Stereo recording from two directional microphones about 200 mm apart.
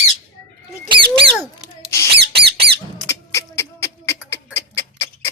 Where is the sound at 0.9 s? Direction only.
25° right (ahead or behind).